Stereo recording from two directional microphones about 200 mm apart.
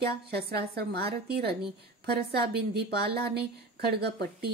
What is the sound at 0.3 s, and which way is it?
A woman's voice, 50° right (ahead or behind).